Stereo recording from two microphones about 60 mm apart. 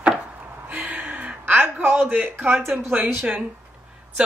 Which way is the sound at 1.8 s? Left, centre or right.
Right.